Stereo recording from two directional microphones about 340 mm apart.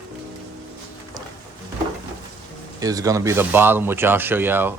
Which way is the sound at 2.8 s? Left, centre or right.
Centre.